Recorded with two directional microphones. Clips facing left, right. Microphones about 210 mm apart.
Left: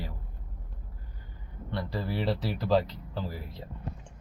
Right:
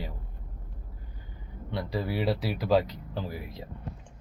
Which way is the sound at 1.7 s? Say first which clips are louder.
Right 2 dB; 15° right (ahead or behind).